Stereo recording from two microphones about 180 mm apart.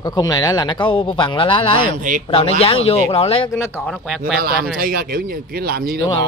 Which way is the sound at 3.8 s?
Centre (ahead or behind).